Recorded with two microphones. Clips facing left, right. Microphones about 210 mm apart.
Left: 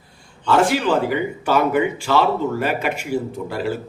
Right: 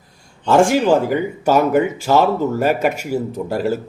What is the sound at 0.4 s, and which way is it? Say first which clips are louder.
Speech: right 4 dB; 45° right (ahead or behind).